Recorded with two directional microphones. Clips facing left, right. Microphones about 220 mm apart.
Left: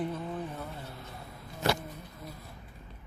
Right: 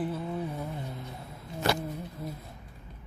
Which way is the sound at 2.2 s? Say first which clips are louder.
Right 6 dB; 30° right (ahead or behind).